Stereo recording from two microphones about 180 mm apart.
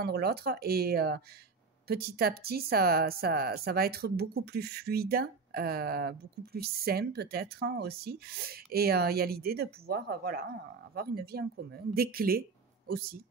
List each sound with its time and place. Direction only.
0.0 s speech: 60° right (ahead or behind)